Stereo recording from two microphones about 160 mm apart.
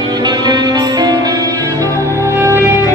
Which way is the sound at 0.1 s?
25° right (ahead or behind).